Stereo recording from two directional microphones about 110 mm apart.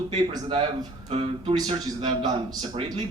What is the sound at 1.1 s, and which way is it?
Speech, 65° right (ahead or behind).